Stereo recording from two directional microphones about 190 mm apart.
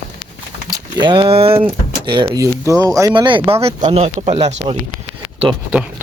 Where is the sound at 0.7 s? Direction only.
20° right (ahead or behind).